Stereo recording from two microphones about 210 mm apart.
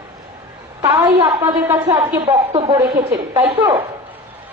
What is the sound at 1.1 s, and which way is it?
A woman's voice, 30° right (ahead or behind).